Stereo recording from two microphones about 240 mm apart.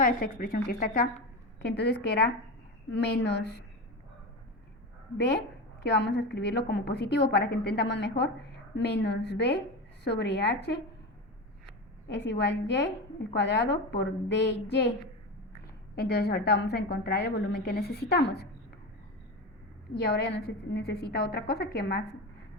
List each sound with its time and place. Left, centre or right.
0.0 s a woman's voice: left
5.8 s a woman's voice: left
12.0 s a woman's voice: left
16.0 s a woman's voice: left
19.9 s a woman's voice: left